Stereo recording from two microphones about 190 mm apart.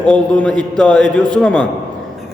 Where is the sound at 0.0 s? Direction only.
5° left (ahead or behind).